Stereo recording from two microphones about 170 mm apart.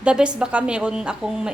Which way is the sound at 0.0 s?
5° right (ahead or behind).